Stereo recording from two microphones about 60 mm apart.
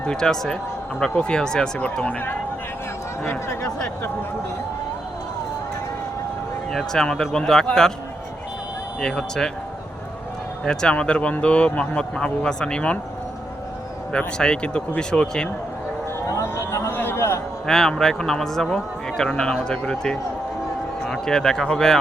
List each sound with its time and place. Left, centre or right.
0.0 s a man's voice: centre
1.8 s speech: left
3.2 s a man's voice: left
6.7 s a man's voice: centre
9.0 s a man's voice: centre
10.7 s a man's voice: centre
14.1 s a man's voice: centre
16.3 s speech: left
16.9 s a man's voice: left
17.7 s a man's voice: centre